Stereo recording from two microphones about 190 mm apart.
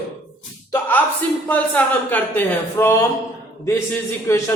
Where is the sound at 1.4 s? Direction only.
10° left (ahead or behind).